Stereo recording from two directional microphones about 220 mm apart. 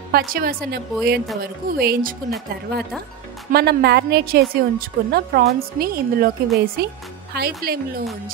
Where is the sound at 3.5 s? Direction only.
45° right (ahead or behind).